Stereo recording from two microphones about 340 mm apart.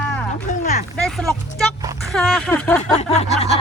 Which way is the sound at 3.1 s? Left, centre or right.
Centre.